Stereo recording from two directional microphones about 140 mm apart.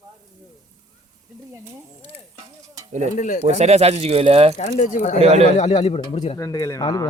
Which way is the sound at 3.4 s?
50° right (ahead or behind).